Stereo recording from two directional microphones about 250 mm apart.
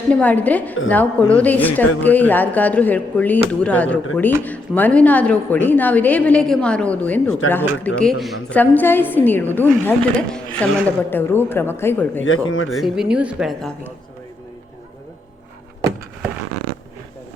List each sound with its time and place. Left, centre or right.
0.1 s a woman's voice: centre
12.2 s speech: left
12.7 s speech: centre